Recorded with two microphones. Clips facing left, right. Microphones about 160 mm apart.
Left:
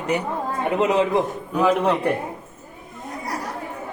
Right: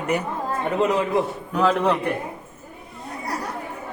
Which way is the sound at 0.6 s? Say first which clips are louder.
Left 2 dB; 15° left (ahead or behind).